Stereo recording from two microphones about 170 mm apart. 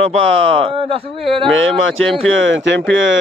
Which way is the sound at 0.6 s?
35° right (ahead or behind).